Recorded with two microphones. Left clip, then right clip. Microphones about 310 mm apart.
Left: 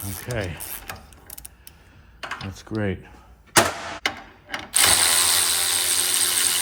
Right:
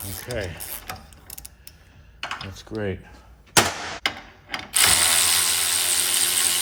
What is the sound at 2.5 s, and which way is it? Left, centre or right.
Speech, left.